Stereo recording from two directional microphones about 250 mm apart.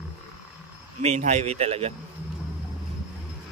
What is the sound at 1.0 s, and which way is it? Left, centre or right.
Speech, right.